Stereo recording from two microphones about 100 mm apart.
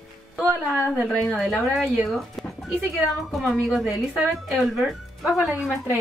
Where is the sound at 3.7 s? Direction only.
Centre (ahead or behind).